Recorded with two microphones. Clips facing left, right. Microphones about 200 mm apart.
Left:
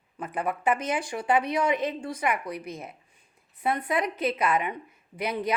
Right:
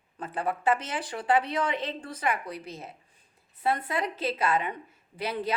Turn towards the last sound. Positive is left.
turn(degrees=15)  # may be behind; listen again after turning